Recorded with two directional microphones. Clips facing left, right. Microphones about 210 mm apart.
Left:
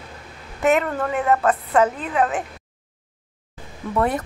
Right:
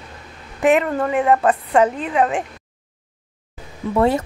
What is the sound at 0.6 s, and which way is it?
A woman's voice, 15° right (ahead or behind).